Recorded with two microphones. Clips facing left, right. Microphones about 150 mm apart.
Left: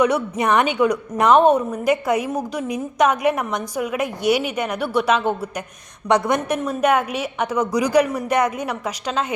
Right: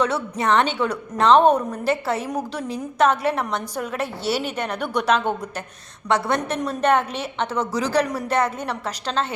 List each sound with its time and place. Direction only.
0.0 s a woman's voice: 15° left (ahead or behind)